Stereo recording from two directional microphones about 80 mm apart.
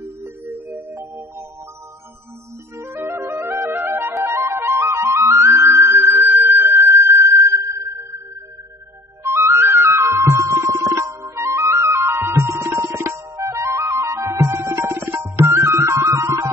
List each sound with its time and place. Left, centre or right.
0.2 s music: right
2.8 s music: right
4.2 s flute: right
9.2 s music: right
11.4 s flute: right